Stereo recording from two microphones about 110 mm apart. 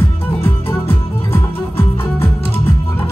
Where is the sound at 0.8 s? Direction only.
20° left (ahead or behind).